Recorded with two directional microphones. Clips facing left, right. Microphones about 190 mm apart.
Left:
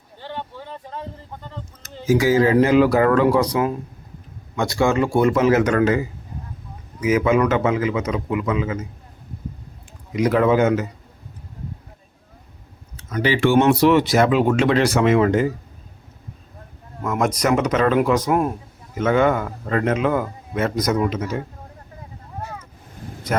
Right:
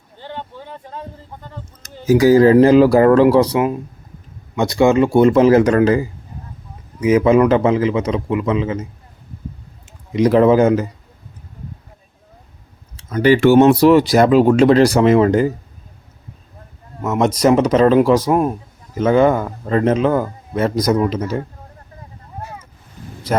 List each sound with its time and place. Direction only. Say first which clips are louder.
0.2 s vehicle: right 1 dB; 15° right (ahead or behind)
1.8 s a man's voice: right 5 dB; 40° right (ahead or behind)
10.1 s a man's voice: right 5 dB; 30° right (ahead or behind)
13.2 s a man's voice: right 6 dB; 45° right (ahead or behind)
17.0 s a man's voice: right 5 dB; 25° right (ahead or behind)